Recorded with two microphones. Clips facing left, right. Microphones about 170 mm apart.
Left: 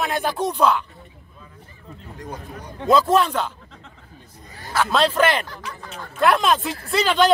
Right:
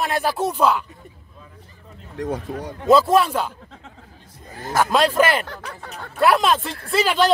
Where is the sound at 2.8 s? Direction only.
5° right (ahead or behind).